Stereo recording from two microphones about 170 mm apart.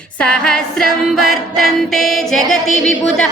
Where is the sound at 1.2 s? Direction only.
60° right (ahead or behind).